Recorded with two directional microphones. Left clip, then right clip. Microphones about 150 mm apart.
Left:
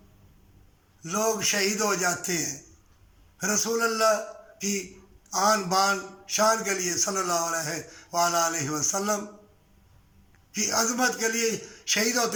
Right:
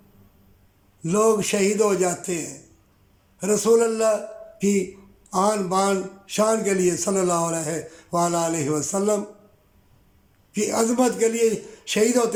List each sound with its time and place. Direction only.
1.0 s speech: 20° right (ahead or behind)
10.5 s speech: 25° right (ahead or behind)